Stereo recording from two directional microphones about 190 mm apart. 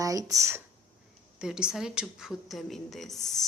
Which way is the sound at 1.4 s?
5° right (ahead or behind).